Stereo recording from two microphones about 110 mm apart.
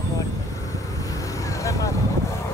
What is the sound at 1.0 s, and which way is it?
Vehicle, 30° left (ahead or behind).